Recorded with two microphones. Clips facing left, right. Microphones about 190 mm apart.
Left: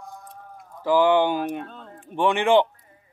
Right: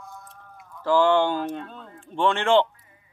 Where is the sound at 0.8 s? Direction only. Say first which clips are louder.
Left 1 dB; 15° left (ahead or behind).